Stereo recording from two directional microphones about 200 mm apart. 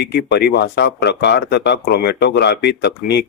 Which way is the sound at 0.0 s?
55° left (ahead or behind).